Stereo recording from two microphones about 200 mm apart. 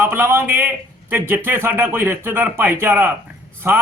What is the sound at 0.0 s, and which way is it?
A man's voice, 10° right (ahead or behind).